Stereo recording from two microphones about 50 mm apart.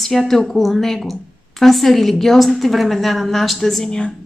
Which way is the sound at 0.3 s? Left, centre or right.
Centre.